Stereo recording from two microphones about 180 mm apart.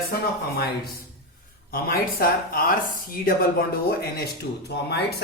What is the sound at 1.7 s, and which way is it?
Speech, 55° left (ahead or behind).